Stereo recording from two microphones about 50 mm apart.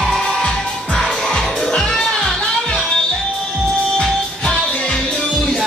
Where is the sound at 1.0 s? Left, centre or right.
Centre.